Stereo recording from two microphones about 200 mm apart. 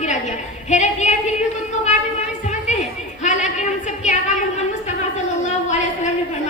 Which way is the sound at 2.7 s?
35° left (ahead or behind).